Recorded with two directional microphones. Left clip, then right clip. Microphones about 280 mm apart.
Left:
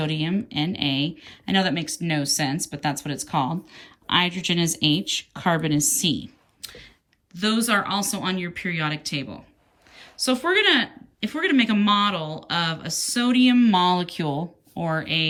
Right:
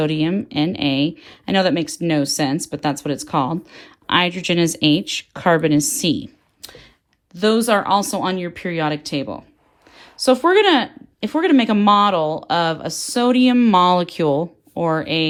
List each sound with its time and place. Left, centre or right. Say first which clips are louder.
0.0 s speech: right 7 dB; centre